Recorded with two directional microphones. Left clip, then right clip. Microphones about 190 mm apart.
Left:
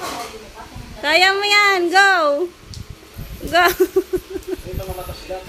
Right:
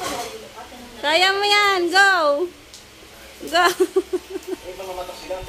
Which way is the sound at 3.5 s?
5° left (ahead or behind).